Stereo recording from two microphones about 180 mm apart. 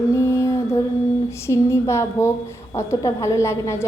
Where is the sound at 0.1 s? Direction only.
15° left (ahead or behind).